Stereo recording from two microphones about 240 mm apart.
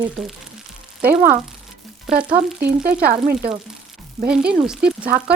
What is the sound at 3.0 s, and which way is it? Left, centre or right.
Speech, right.